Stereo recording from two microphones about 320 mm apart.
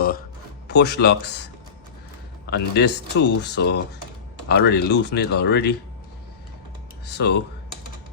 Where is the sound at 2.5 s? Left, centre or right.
Left.